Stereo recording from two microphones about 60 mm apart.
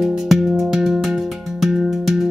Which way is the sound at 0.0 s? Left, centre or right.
Centre.